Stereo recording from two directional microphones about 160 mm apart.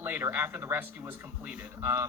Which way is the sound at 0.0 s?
10° right (ahead or behind).